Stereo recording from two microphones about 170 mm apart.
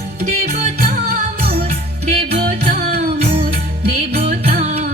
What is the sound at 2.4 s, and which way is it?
Music, 65° right (ahead or behind).